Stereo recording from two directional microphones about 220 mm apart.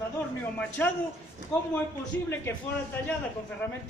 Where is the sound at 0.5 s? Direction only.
5° left (ahead or behind).